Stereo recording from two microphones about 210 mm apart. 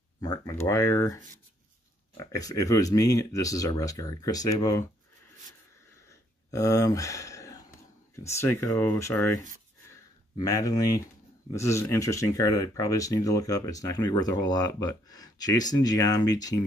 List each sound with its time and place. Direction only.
0.2 s speech: 15° left (ahead or behind)
2.3 s speech: 15° left (ahead or behind)
6.5 s speech: 15° left (ahead or behind)
10.4 s speech: 15° left (ahead or behind)